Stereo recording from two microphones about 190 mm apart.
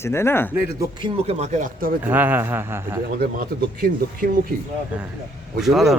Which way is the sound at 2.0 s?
10° right (ahead or behind).